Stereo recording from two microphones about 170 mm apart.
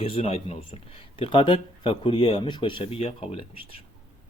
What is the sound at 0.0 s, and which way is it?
Speech, 35° left (ahead or behind).